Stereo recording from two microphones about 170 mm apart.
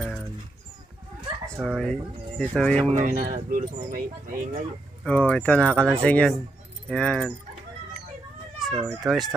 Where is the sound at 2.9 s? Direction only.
50° right (ahead or behind).